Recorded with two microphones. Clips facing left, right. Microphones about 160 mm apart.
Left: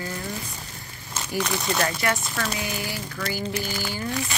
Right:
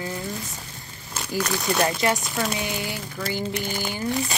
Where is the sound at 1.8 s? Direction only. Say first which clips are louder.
Right 5 dB; 20° right (ahead or behind).